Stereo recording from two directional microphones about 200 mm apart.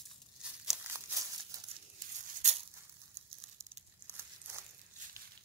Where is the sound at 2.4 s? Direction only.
35° right (ahead or behind).